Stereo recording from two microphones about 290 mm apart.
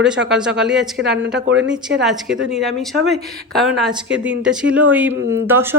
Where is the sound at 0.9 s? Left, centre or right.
Right.